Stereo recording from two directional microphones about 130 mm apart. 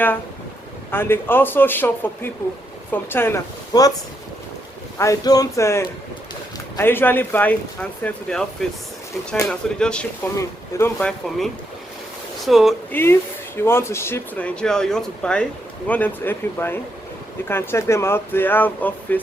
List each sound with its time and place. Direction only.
0.9 s speech: 15° left (ahead or behind)
3.7 s speech: 30° left (ahead or behind)
4.9 s speech: 25° left (ahead or behind); by 8.4 s 5° left (ahead or behind)
9.5 s speech: 5° left (ahead or behind)
10.3 s speech: 20° left (ahead or behind)
11.0 s speech: 5° left (ahead or behind)
12.9 s speech: 15° left (ahead or behind)